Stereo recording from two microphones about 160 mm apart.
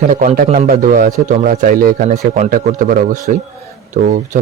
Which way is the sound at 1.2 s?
50° right (ahead or behind).